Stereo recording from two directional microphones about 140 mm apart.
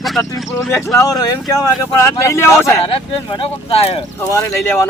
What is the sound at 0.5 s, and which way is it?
Speech, 20° left (ahead or behind).